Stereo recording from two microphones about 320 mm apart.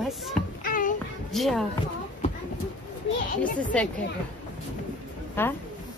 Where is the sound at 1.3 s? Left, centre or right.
Centre.